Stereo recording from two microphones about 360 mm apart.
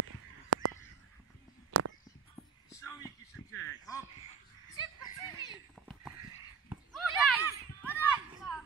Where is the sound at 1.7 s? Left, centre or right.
Right.